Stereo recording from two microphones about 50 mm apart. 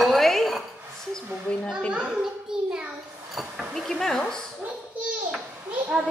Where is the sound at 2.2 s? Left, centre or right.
Centre.